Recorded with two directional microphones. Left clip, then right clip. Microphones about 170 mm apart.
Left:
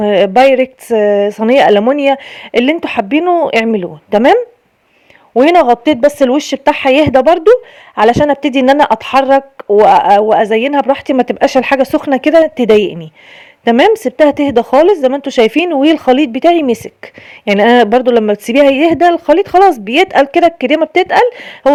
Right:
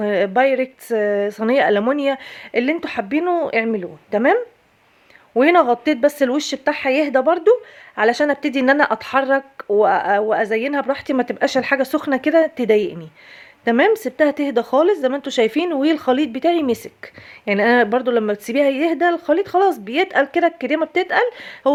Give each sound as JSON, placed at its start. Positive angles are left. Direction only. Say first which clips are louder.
{"t": 0.0, "sound": "speech", "louder": "left 9 dB", "side_deg": 40}
{"t": 5.3, "sound": "speech", "louder": "left 7 dB", "side_deg": 30}